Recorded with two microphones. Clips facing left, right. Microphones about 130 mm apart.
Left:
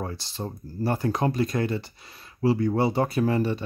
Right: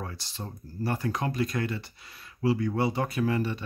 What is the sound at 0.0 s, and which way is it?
Speech, 30° left (ahead or behind).